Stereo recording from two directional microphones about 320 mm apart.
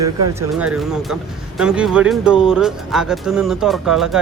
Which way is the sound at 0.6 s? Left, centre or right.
Centre.